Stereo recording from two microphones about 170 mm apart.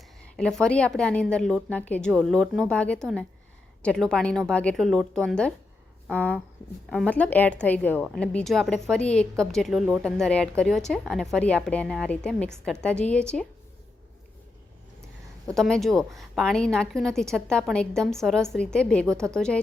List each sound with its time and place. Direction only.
0.3 s a woman's voice: 5° left (ahead or behind)
15.5 s speech: centre (ahead or behind)